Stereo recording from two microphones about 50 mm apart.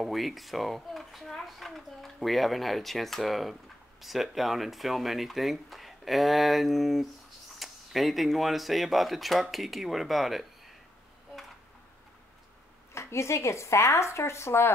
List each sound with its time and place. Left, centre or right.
0.0 s a child's voice: centre
12.9 s speech: left